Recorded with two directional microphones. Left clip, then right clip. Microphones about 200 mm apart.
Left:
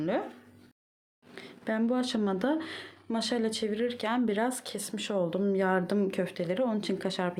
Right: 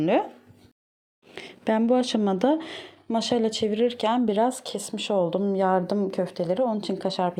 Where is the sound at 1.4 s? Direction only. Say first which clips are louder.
Right 7 dB; 30° right (ahead or behind); by 7.3 s 10° right (ahead or behind).